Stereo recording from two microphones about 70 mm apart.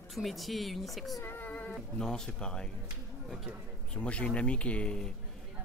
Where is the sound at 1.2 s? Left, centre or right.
Left.